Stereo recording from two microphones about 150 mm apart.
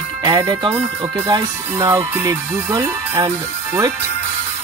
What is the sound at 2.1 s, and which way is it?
Speech, 15° right (ahead or behind).